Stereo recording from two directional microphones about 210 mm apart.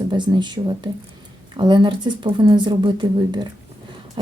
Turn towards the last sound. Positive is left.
turn(degrees=-20)  # may be behind; listen again after turning